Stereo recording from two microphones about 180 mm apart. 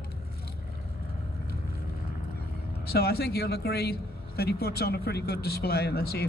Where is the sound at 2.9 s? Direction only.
60° left (ahead or behind).